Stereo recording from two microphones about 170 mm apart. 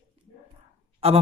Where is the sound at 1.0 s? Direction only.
35° right (ahead or behind).